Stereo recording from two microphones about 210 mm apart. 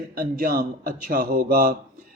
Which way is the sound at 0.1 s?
45° right (ahead or behind).